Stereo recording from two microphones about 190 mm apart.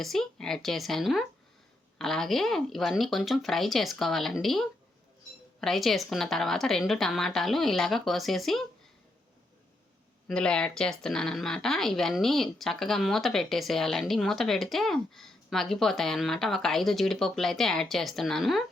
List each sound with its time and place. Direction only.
0.0 s speech: centre (ahead or behind)
10.2 s speech: 5° left (ahead or behind)